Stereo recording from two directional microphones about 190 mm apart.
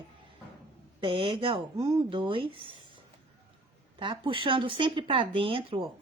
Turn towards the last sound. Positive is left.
turn(degrees=-30)  # may be behind; listen again after turning